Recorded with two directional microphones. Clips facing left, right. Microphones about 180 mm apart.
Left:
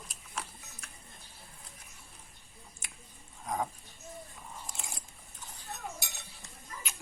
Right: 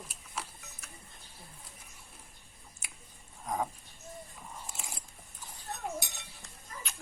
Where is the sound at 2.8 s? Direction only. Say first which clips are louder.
Right 2 dB; 5° right (ahead or behind).